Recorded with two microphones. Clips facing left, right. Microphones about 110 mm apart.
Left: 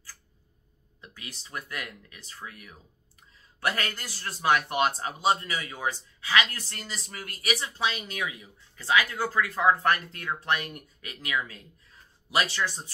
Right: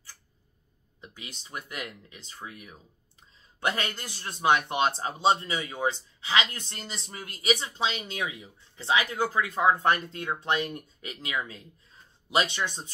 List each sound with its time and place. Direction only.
1.0 s a man's voice: 20° right (ahead or behind)